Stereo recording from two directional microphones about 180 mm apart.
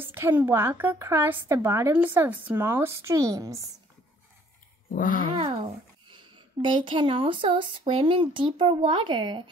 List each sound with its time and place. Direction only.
0.0 s a woman's voice: 10° right (ahead or behind)
4.9 s speech: 50° left (ahead or behind)
5.4 s a child's voice: 30° right (ahead or behind)